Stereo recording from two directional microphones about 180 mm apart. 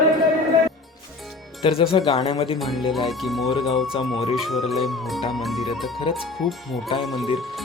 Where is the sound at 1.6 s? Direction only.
30° left (ahead or behind).